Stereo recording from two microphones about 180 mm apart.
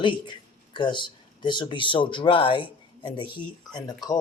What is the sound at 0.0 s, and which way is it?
Speech, 25° left (ahead or behind).